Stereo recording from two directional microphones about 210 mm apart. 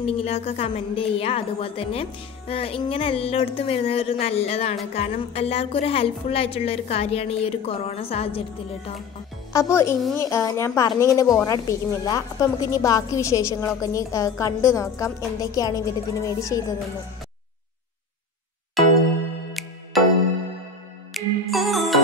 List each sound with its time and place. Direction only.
0.0 s a woman's voice: 30° left (ahead or behind)
9.5 s a woman's voice: 15° left (ahead or behind)
19.9 s music: centre (ahead or behind)